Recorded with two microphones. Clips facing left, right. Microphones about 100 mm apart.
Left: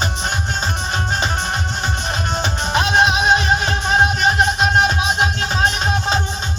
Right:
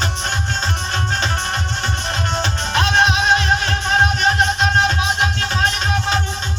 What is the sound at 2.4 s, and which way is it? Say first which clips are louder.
Music: left 1 dB; 15° left (ahead or behind).